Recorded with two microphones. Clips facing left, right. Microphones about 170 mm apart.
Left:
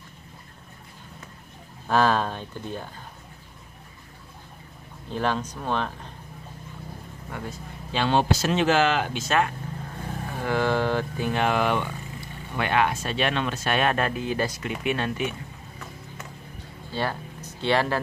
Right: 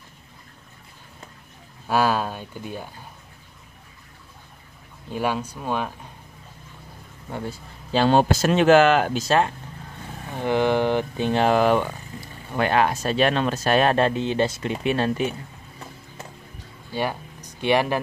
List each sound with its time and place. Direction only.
1.9 s speech: 10° right (ahead or behind)
5.1 s speech: 10° right (ahead or behind)
7.2 s speech: 30° right (ahead or behind); by 9.2 s 50° right (ahead or behind)
10.4 s speech: 20° right (ahead or behind); by 15.3 s 35° right (ahead or behind)
16.9 s speech: 15° right (ahead or behind)